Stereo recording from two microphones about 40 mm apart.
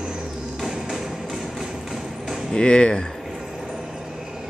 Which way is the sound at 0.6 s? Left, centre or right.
Centre.